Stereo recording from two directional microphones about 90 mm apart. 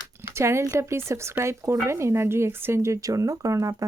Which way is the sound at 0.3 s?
30° right (ahead or behind).